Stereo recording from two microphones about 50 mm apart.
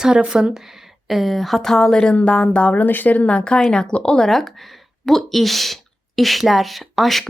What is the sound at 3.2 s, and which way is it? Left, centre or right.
Speech, left.